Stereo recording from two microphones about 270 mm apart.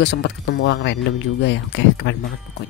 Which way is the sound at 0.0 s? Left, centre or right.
Left.